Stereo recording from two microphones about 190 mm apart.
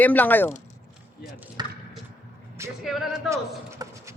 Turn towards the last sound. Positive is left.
turn(degrees=0)  # may be behind; listen again after turning